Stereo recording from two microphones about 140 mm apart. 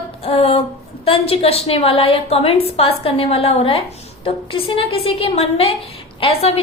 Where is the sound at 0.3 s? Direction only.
45° left (ahead or behind).